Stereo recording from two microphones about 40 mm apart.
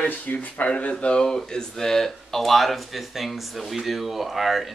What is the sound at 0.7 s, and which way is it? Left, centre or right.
Speech, left.